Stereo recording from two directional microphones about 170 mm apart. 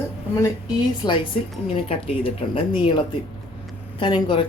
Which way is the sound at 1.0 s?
25° left (ahead or behind).